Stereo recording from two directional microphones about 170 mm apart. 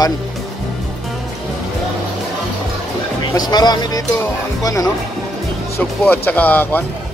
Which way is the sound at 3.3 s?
25° left (ahead or behind).